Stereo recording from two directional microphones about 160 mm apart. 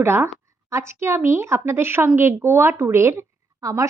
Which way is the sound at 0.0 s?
15° right (ahead or behind).